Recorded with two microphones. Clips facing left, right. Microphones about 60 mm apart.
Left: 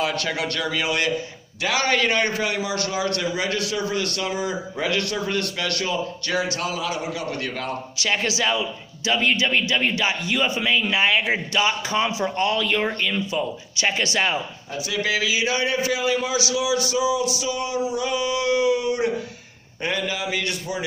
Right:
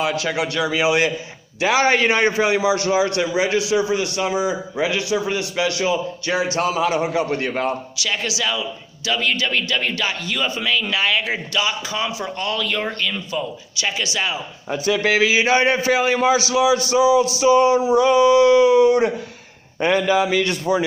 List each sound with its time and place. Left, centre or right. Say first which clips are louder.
0.0 s a man's voice: right 3 dB; centre; by 7.7 s right
8.0 s a man's voice: left 3 dB; left
13.8 s a man's voice: left 1 dB; left
15.0 s a man's voice: right 4 dB; right